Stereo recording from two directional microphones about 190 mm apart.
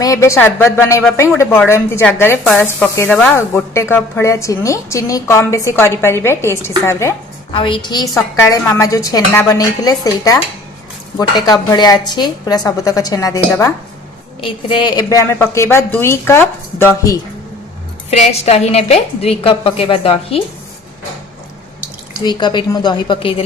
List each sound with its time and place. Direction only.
0.0 s speech: 15° left (ahead or behind)
7.5 s a woman's voice: 25° left (ahead or behind)
18.1 s a woman's voice: 35° left (ahead or behind)
22.2 s a woman's voice: 25° left (ahead or behind)